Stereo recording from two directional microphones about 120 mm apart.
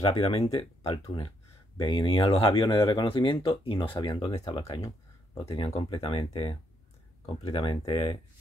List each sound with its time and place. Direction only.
0.0 s speech: 55° left (ahead or behind)
1.8 s speech: 40° left (ahead or behind)
4.8 s a sound: 25° left (ahead or behind)
5.8 s speech: 50° left (ahead or behind)